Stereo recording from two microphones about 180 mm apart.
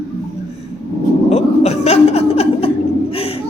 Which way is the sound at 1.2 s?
35° left (ahead or behind).